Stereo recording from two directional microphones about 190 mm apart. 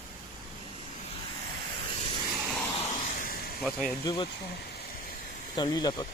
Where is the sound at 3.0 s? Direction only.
45° left (ahead or behind).